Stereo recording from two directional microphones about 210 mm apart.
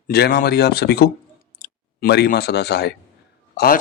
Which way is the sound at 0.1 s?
45° left (ahead or behind).